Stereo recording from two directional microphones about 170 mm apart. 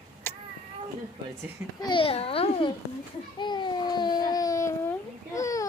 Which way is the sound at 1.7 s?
25° left (ahead or behind).